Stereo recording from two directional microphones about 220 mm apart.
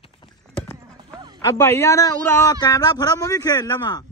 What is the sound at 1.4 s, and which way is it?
A man's voice, 10° left (ahead or behind).